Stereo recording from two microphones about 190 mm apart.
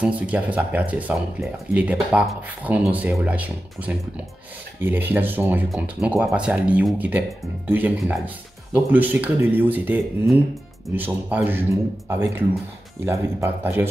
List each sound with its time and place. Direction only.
0.0 s speech: 5° right (ahead or behind)